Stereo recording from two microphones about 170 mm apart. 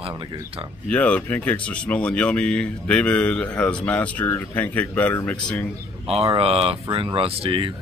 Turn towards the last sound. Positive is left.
turn(degrees=-30)  # may be behind; listen again after turning